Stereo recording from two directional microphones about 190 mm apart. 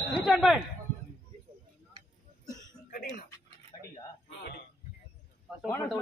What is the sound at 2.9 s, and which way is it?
Speech, 45° left (ahead or behind).